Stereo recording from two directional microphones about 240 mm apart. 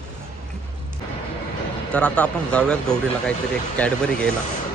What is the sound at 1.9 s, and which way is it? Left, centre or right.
Speech, centre.